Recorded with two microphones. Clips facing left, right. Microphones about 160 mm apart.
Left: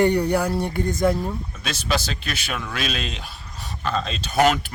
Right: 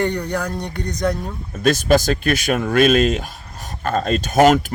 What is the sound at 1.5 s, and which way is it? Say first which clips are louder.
Speech: right 13 dB; 50° right (ahead or behind).